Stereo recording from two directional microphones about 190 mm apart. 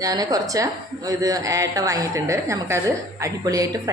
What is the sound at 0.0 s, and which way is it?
A woman's voice, 20° right (ahead or behind).